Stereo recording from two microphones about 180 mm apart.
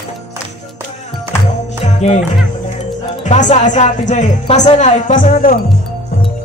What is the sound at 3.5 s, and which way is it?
Speech, 40° left (ahead or behind).